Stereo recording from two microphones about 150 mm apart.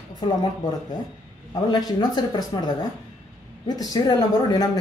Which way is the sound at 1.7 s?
30° left (ahead or behind).